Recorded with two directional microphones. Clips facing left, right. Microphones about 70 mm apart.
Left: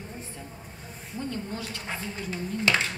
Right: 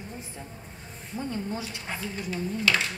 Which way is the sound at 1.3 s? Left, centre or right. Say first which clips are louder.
Right 2 dB; centre.